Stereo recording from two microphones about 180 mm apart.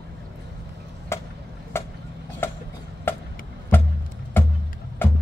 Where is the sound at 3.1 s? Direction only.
10° left (ahead or behind).